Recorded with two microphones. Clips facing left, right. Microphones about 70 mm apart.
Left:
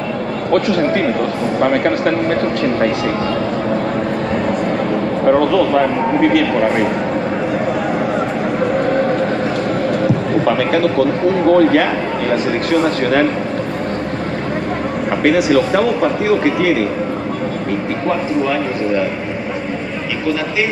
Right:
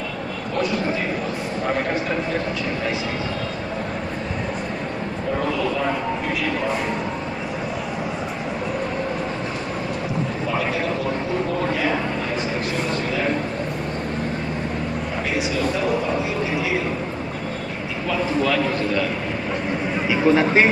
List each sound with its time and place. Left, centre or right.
0.5 s a man's voice: left
5.2 s a man's voice: left
10.4 s a man's voice: left
15.2 s a man's voice: left